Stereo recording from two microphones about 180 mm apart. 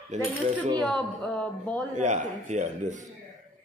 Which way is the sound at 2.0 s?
40° right (ahead or behind).